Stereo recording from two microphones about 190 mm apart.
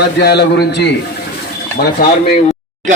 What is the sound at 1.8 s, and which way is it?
Speech, 55° left (ahead or behind).